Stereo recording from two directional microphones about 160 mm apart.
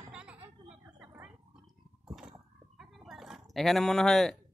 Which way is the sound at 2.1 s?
5° right (ahead or behind).